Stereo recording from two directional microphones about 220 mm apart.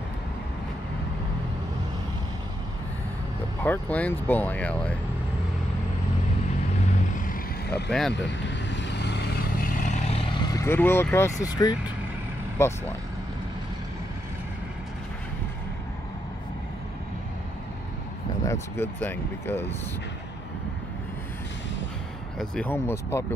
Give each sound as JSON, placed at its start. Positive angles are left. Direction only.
{"t": 3.6, "sound": "speech", "side_deg": 10}
{"t": 7.7, "sound": "speech", "side_deg": 0}
{"t": 8.1, "sound": "vehicle", "side_deg": 55}
{"t": 10.4, "sound": "speech", "side_deg": 15}
{"t": 18.4, "sound": "speech", "side_deg": 10}
{"t": 22.4, "sound": "speech", "side_deg": 5}